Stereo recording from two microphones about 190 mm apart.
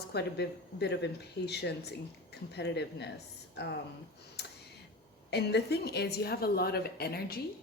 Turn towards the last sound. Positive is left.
turn(degrees=55)  # may be behind; listen again after turning